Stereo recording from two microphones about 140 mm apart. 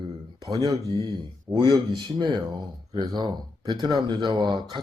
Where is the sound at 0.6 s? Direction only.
30° right (ahead or behind).